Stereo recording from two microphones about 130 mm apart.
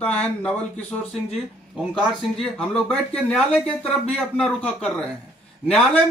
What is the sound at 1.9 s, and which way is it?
Speech, 5° left (ahead or behind).